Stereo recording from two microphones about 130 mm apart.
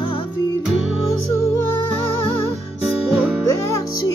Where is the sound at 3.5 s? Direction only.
25° left (ahead or behind).